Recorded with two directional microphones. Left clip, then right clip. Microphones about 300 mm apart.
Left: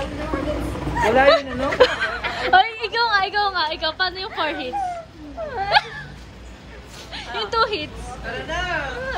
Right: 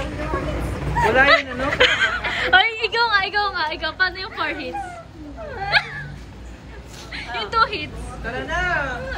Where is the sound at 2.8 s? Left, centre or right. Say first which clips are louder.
Right 1 dB; centre.